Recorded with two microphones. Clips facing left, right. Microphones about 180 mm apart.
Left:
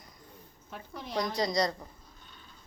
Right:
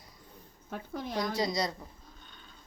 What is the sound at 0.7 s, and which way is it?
Speech, 45° right (ahead or behind).